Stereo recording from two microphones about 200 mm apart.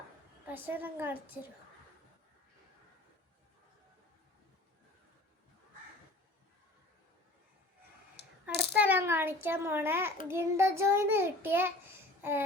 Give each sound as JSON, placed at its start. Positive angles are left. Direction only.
{"t": 0.4, "sound": "child singing", "side_deg": -10}
{"t": 8.2, "sound": "coin", "side_deg": 55}
{"t": 8.8, "sound": "child singing", "side_deg": -10}
{"t": 12.2, "sound": "a sound", "side_deg": -10}